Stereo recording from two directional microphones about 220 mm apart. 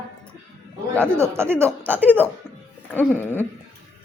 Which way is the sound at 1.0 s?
10° right (ahead or behind).